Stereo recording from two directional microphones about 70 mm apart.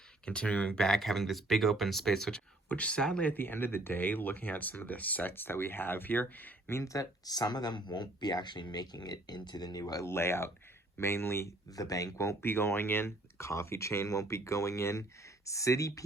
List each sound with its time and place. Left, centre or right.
0.3 s speech: centre
0.7 s speech: centre
2.6 s speech: centre
3.3 s speech: left
6.7 s speech: left
10.1 s speech: left
11.7 s speech: left
12.4 s speech: left